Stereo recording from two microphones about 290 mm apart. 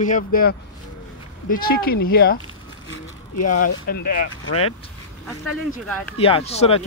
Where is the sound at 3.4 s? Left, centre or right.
Left.